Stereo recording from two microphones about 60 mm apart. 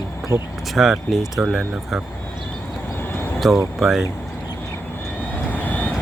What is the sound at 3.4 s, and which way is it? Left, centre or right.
Speech, centre.